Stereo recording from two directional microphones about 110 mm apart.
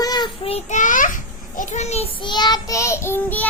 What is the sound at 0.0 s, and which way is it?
Child singing, 40° left (ahead or behind).